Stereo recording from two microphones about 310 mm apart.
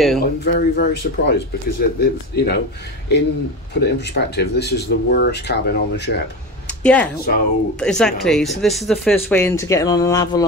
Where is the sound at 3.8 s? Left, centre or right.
Left.